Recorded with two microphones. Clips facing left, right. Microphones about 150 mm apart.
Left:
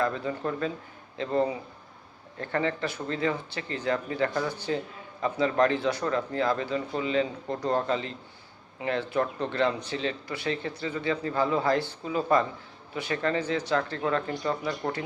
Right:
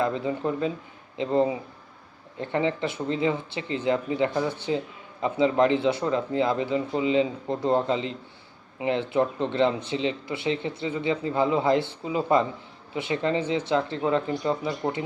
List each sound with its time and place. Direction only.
0.0 s speech: 20° right (ahead or behind)